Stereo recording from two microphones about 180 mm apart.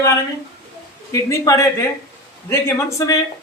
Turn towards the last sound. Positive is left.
turn(degrees=20)  # may be behind; listen again after turning